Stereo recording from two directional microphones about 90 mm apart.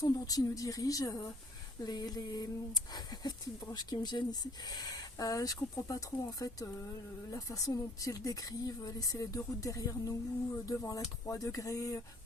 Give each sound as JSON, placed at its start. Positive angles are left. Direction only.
{"t": 0.0, "sound": "speech", "side_deg": 45}